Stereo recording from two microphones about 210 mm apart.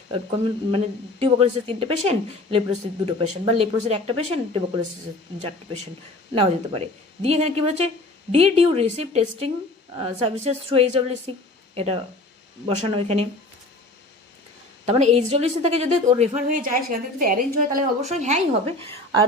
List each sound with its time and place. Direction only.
0.1 s a woman's voice: 25° right (ahead or behind)
14.8 s a woman's voice: 30° right (ahead or behind)